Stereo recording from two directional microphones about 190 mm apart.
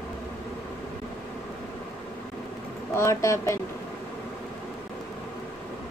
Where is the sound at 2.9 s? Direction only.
15° left (ahead or behind).